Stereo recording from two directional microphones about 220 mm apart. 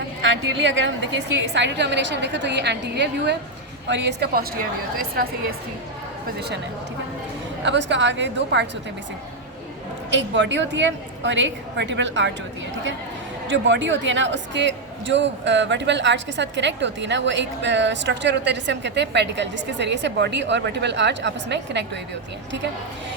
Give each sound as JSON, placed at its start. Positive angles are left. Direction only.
{"t": 0.2, "sound": "a woman's voice", "side_deg": -55}
{"t": 7.6, "sound": "a man's voice", "side_deg": -55}
{"t": 10.1, "sound": "a woman's voice", "side_deg": -55}
{"t": 13.5, "sound": "a man's voice", "side_deg": -55}